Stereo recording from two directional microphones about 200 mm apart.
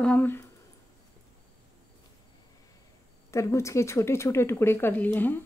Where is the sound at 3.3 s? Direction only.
15° left (ahead or behind).